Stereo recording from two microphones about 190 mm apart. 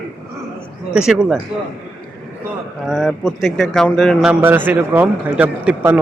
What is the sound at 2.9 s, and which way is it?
Speech, centre (ahead or behind).